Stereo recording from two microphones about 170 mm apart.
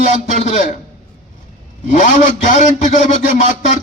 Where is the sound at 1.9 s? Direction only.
45° left (ahead or behind).